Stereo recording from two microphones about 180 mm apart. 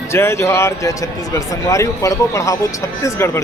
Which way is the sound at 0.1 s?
15° left (ahead or behind).